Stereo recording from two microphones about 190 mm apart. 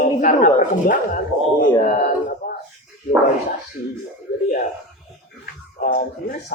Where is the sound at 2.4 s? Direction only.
45° left (ahead or behind).